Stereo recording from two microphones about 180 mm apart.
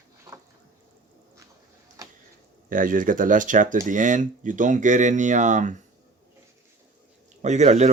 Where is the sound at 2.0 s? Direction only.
20° right (ahead or behind).